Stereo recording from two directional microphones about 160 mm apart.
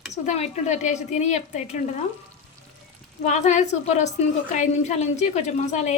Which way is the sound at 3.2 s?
45° left (ahead or behind).